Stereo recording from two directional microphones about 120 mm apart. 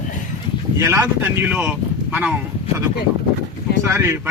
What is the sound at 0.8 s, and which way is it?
A man's voice, 25° right (ahead or behind).